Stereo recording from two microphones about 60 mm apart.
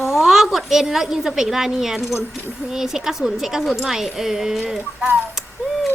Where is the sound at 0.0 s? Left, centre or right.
Centre.